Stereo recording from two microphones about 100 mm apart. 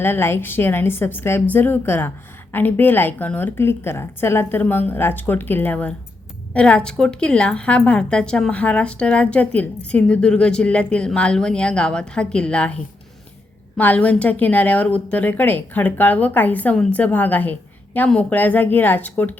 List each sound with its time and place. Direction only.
0.0 s a woman's voice: 25° left (ahead or behind)